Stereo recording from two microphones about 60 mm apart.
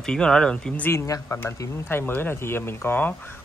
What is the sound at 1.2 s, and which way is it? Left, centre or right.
Speech, left.